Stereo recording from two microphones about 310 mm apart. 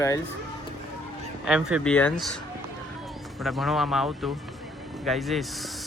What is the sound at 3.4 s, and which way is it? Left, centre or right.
Speech, centre.